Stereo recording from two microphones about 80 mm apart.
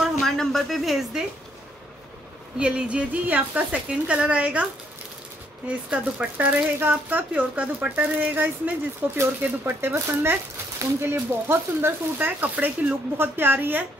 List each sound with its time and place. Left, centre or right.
0.0 s a sound: centre
2.6 s a woman's voice: centre
5.7 s a woman's voice: centre
6.3 s speech: right